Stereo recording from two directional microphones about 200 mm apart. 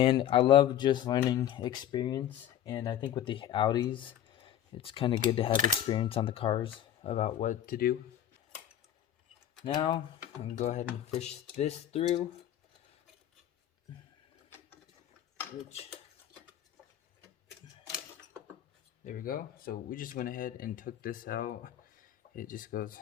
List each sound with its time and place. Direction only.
0.0 s speech: 25° left (ahead or behind); by 7.9 s 45° left (ahead or behind)
9.6 s speech: 25° left (ahead or behind)
10.4 s speech: 35° left (ahead or behind)
19.0 s speech: 45° left (ahead or behind)